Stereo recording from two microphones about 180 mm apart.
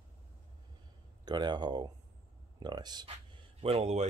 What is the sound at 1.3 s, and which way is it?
Speech, 25° right (ahead or behind).